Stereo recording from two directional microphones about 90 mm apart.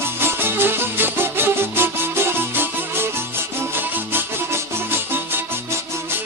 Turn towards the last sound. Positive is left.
turn(degrees=-25)  # may be behind; listen again after turning